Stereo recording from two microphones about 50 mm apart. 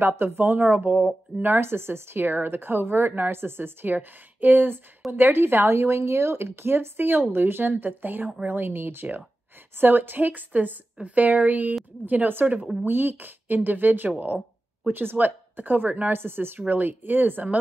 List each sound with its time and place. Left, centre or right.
0.1 s a woman's voice: right
0.6 s a woman's voice: right
16.1 s a woman's voice: right